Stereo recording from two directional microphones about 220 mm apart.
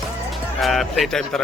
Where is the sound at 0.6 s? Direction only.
Centre (ahead or behind).